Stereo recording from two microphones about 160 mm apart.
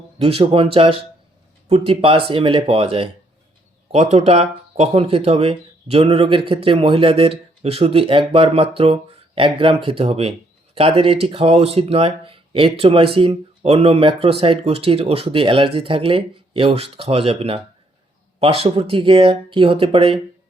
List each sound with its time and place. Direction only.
0.2 s speech: 35° right (ahead or behind)